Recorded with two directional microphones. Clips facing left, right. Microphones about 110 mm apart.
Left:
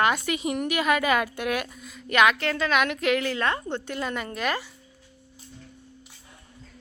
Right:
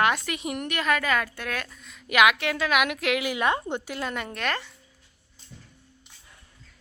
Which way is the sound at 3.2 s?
15° right (ahead or behind).